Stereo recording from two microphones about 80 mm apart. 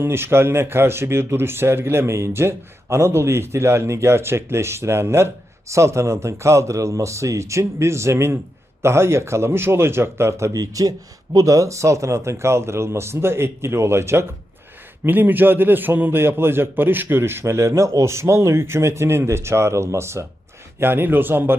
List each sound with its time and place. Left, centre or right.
0.0 s a man's voice: right
10.5 s a man's voice: right